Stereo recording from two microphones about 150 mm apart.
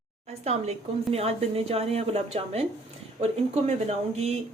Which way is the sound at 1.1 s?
40° right (ahead or behind).